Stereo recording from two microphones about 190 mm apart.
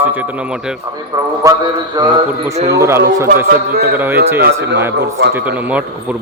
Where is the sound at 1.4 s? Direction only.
15° right (ahead or behind).